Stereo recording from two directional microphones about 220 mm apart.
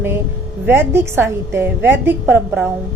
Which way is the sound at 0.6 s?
10° right (ahead or behind).